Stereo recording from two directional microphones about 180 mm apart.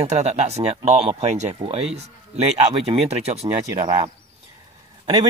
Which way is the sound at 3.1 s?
35° right (ahead or behind).